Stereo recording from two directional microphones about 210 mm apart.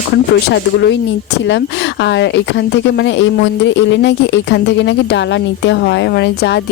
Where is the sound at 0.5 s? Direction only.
55° left (ahead or behind).